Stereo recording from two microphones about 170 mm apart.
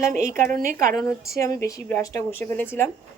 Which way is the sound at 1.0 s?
20° left (ahead or behind).